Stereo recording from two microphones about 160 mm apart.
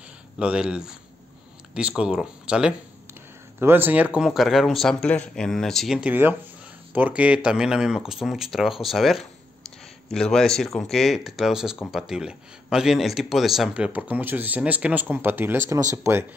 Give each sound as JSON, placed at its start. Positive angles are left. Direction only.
{"t": 0.4, "sound": "speech", "side_deg": -5}